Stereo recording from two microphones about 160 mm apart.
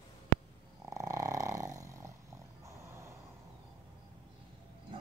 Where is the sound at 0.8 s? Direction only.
20° right (ahead or behind).